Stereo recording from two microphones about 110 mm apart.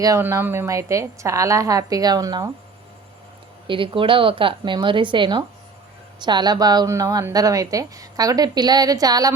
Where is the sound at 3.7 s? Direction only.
50° right (ahead or behind); by 9.3 s 35° right (ahead or behind).